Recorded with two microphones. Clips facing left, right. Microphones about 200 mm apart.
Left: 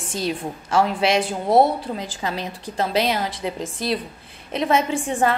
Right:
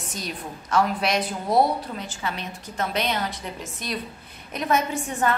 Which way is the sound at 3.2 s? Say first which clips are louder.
Left 6 dB; 90° left.